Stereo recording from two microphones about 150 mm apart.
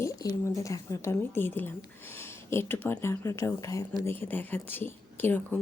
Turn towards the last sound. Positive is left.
turn(degrees=15)  # may be behind; listen again after turning